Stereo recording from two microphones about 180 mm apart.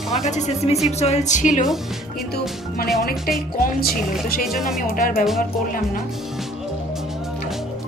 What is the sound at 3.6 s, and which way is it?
Speech, 55° left (ahead or behind).